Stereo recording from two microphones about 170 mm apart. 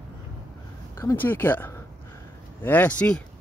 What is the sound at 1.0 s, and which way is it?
Speech, 15° left (ahead or behind).